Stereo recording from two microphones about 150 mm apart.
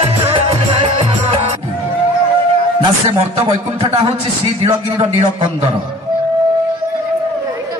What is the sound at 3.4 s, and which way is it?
A man's voice, 40° right (ahead or behind).